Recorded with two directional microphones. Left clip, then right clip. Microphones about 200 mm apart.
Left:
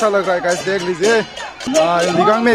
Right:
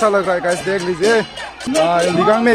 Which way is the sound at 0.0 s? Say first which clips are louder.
Even; 5° right (ahead or behind).